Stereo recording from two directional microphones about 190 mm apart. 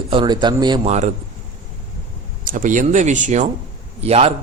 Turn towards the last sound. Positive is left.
turn(degrees=-30)  # may be behind; listen again after turning